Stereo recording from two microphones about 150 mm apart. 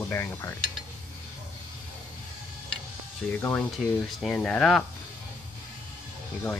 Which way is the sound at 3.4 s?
10° left (ahead or behind).